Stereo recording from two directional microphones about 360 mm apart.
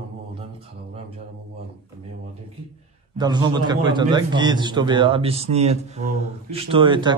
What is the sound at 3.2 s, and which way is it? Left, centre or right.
A man's voice, centre.